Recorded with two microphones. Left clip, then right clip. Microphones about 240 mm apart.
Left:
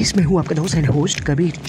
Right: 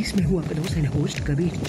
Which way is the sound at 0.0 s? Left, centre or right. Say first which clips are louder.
Left 7 dB; centre.